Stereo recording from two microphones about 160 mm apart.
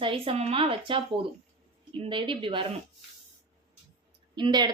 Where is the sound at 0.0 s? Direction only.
35° right (ahead or behind).